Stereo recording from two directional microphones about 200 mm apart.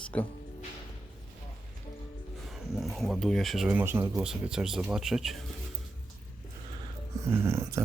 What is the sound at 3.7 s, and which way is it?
Speech, 10° right (ahead or behind).